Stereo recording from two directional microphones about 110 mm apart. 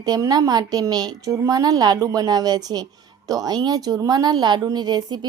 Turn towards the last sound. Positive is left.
turn(degrees=-40)  # may be behind; listen again after turning